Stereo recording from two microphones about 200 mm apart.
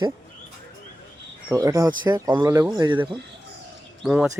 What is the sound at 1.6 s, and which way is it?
Speech, 15° right (ahead or behind).